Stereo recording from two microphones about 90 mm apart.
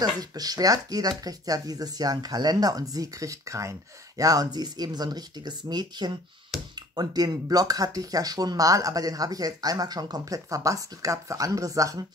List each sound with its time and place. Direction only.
0.0 s speech: 45° right (ahead or behind)
6.5 s a sound: centre (ahead or behind)
7.0 s speech: 45° right (ahead or behind)